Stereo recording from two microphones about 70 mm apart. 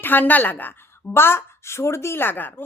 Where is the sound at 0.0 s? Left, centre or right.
Left.